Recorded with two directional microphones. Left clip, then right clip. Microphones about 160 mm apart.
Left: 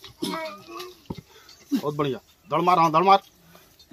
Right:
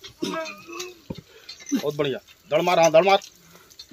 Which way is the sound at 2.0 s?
90° left.